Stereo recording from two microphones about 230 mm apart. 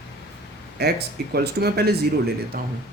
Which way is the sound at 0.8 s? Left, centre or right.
Right.